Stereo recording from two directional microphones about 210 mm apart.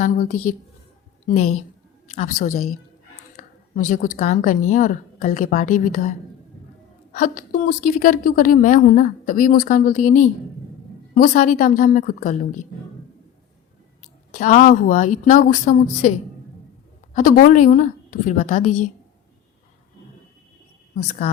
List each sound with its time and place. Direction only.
0.0 s a woman's voice: 35° left (ahead or behind)
2.1 s a woman's voice: 40° left (ahead or behind)
2.5 s a woman's voice: 85° left
3.3 s a woman's voice: 40° left (ahead or behind)
7.2 s a woman's voice: 40° left (ahead or behind)
14.3 s a woman's voice: 35° left (ahead or behind)
17.2 s a woman's voice: 40° left (ahead or behind)
20.9 s a woman's voice: 35° left (ahead or behind)